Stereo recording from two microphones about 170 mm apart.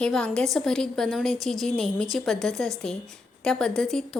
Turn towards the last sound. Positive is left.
turn(degrees=5)  # may be behind; listen again after turning